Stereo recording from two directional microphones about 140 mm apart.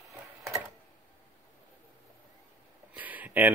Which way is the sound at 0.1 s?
20° right (ahead or behind).